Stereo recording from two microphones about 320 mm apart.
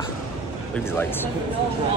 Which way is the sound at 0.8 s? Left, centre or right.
Centre.